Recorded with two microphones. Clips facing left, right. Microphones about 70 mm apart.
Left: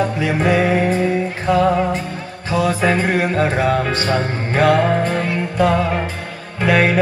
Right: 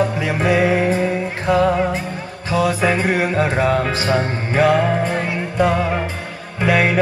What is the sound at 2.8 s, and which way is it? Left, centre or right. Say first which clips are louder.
Music: left 1 dB; centre.